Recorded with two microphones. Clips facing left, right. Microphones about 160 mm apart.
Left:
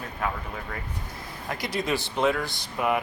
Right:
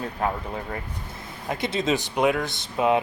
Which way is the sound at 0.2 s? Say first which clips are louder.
Right 4 dB; 35° right (ahead or behind).